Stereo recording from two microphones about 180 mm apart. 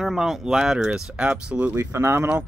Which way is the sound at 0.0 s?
Centre (ahead or behind).